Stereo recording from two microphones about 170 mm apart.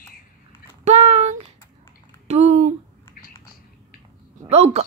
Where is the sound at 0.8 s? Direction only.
40° right (ahead or behind).